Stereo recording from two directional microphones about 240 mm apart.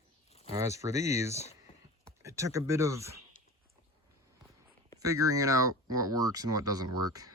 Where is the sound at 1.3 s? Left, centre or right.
Left.